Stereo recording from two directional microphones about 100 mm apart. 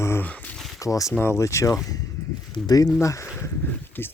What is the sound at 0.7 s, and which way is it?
Speech, 35° left (ahead or behind).